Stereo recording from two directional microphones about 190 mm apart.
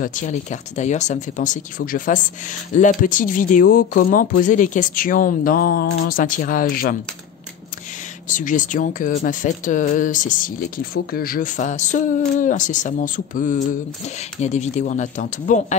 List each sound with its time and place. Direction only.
0.0 s speech: 40° left (ahead or behind)
8.3 s speech: 40° left (ahead or behind)